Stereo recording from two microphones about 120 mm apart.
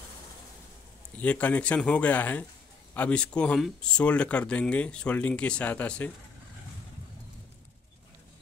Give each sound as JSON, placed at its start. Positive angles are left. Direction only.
{"t": 1.1, "sound": "speech", "side_deg": 10}